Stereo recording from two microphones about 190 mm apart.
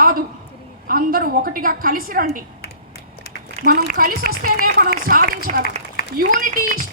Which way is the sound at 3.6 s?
50° right (ahead or behind).